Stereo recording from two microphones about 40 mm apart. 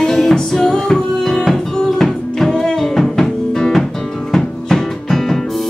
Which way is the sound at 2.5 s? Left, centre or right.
Centre.